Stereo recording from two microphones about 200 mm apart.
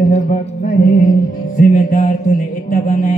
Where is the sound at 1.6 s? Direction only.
40° left (ahead or behind).